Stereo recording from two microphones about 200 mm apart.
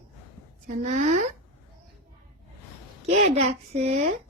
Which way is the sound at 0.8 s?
35° right (ahead or behind).